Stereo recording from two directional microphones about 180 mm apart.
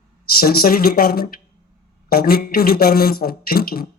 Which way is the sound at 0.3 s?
55° left (ahead or behind).